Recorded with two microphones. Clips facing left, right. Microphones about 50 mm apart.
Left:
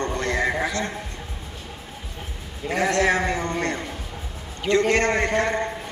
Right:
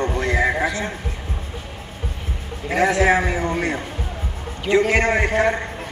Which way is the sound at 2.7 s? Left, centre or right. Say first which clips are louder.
Right 4 dB; centre.